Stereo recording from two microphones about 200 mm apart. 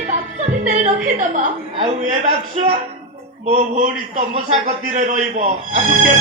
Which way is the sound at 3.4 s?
30° right (ahead or behind).